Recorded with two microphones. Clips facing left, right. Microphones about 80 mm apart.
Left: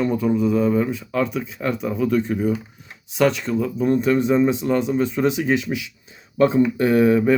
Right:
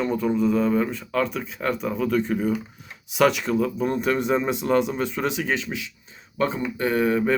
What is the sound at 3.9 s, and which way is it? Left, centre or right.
Speech, centre.